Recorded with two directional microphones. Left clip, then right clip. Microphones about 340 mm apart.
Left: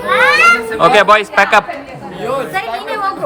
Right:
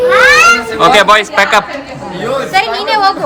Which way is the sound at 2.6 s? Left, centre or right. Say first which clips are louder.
Right 8 dB; right.